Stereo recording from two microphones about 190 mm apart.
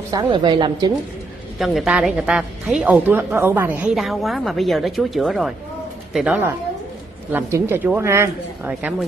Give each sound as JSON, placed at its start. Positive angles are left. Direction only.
{"t": 0.1, "sound": "a woman's voice", "side_deg": -20}
{"t": 1.6, "sound": "a woman's voice", "side_deg": 0}